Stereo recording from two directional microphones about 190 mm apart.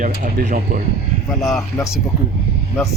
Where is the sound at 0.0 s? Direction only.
50° right (ahead or behind).